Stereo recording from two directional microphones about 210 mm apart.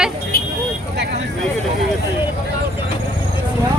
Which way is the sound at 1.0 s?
55° right (ahead or behind).